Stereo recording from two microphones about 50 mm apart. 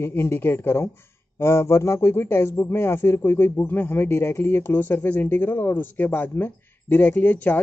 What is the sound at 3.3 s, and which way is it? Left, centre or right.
Speech, left.